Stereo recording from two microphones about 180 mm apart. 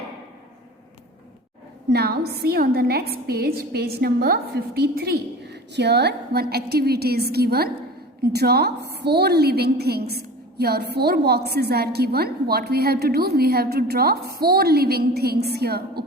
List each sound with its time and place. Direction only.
1.9 s a woman's voice: 65° right (ahead or behind)